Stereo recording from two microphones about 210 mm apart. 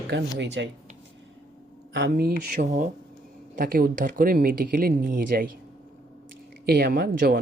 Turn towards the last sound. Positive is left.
turn(degrees=-50)  # may be behind; listen again after turning